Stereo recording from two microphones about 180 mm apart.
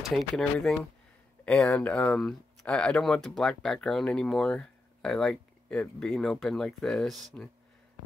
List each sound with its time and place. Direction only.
0.0 s speech: centre (ahead or behind)